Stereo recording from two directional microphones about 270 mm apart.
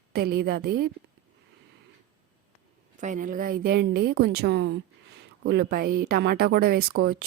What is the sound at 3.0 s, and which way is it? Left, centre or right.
A woman's voice, right.